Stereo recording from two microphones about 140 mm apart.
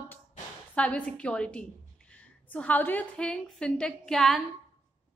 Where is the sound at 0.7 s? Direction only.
10° left (ahead or behind).